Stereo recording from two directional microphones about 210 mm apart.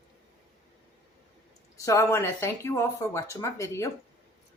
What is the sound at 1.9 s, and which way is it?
Speech, 15° left (ahead or behind).